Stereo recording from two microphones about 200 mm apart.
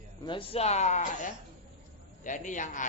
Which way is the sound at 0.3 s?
25° left (ahead or behind).